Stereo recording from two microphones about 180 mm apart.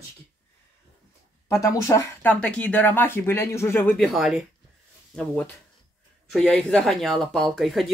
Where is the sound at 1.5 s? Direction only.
20° left (ahead or behind).